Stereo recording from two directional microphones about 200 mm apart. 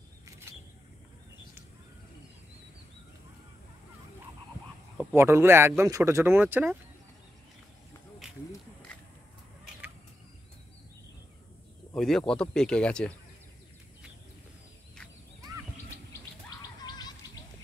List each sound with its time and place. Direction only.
5.1 s speech: 10° right (ahead or behind)
11.9 s speech: centre (ahead or behind)
16.1 s bird: 20° left (ahead or behind)